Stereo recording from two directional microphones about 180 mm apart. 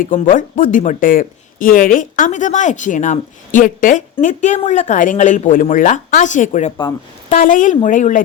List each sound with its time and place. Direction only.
0.0 s speech: 50° left (ahead or behind)